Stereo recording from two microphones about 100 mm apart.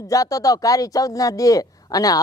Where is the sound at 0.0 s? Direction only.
35° left (ahead or behind).